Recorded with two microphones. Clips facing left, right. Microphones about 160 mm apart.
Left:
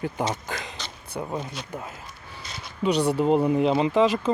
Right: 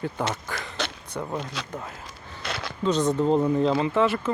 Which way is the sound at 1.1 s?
10° left (ahead or behind).